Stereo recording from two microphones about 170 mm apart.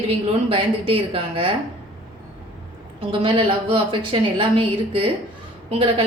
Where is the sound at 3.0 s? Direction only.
30° right (ahead or behind).